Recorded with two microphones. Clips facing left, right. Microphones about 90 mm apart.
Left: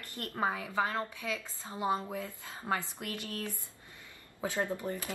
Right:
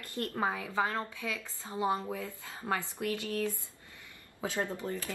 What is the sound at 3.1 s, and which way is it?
Speech, 20° right (ahead or behind).